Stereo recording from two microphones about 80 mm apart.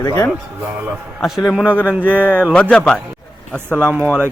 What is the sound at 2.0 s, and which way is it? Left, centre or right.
Speech, right.